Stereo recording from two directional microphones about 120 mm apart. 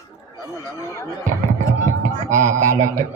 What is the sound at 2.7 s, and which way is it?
Speech, 25° right (ahead or behind).